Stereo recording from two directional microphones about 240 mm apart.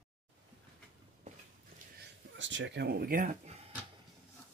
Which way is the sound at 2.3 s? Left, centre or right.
Right.